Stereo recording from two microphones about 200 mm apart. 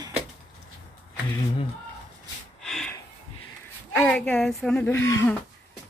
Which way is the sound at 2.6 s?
Centre (ahead or behind).